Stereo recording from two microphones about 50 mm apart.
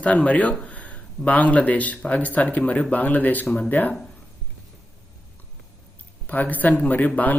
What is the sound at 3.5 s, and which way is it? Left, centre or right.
Speech, left.